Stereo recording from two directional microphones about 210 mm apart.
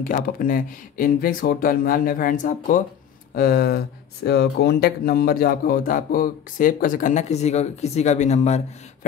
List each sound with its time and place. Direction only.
0.0 s speech: 40° left (ahead or behind)